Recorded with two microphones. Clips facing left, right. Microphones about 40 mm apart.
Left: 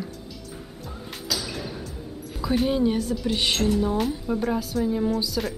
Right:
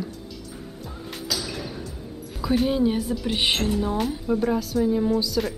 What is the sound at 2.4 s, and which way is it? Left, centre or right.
Speech, centre.